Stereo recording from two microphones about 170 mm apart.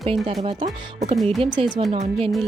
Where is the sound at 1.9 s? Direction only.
35° right (ahead or behind).